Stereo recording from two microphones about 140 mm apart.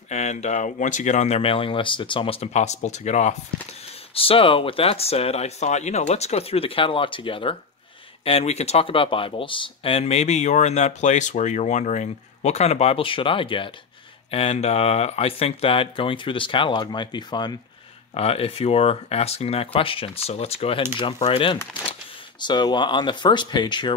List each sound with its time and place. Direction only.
0.1 s speech: 55° left (ahead or behind)
4.1 s speech: 40° left (ahead or behind)
18.1 s speech: 45° left (ahead or behind)
22.4 s speech: 30° left (ahead or behind)